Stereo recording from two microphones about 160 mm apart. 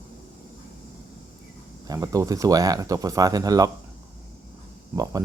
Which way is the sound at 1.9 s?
20° right (ahead or behind).